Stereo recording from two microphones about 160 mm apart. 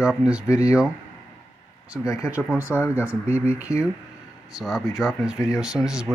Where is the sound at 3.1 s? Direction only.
15° left (ahead or behind).